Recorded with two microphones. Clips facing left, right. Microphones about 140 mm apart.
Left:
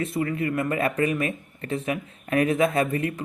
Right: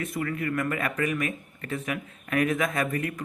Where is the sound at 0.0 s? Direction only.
25° left (ahead or behind).